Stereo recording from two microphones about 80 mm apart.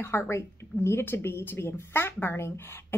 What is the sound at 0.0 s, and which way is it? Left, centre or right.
Speech, left.